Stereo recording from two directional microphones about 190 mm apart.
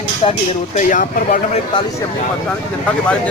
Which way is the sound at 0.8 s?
45° left (ahead or behind).